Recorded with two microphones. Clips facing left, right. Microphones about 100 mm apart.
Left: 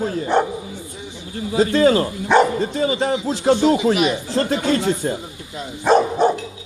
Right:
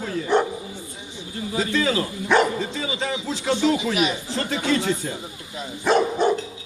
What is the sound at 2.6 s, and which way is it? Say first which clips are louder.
Speech: left 7 dB; 45° left (ahead or behind).